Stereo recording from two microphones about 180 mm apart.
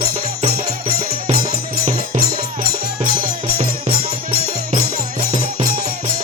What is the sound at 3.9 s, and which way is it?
Music, 55° right (ahead or behind).